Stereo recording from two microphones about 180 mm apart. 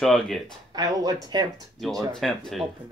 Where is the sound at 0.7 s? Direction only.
20° right (ahead or behind).